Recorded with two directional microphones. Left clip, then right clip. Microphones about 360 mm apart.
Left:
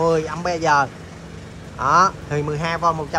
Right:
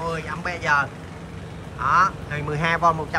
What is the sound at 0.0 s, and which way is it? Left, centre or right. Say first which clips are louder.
Speech: left 8 dB; centre.